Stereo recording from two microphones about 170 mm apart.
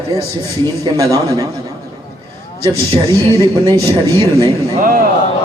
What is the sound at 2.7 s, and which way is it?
A man's voice, 30° right (ahead or behind).